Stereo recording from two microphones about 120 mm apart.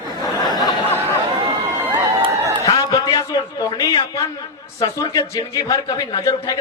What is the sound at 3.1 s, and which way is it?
A man's voice, 35° left (ahead or behind).